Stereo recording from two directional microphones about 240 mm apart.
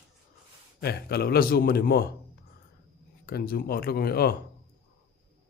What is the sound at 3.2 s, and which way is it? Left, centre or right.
Speech, left.